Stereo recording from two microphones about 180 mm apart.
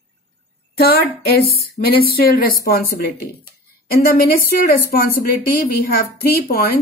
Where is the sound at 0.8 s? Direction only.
60° left (ahead or behind).